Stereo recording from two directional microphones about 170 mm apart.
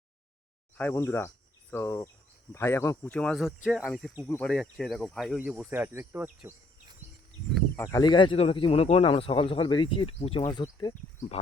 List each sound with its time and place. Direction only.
0.8 s speech: 10° left (ahead or behind)
5.4 s speech: 10° right (ahead or behind)
7.8 s speech: 20° left (ahead or behind)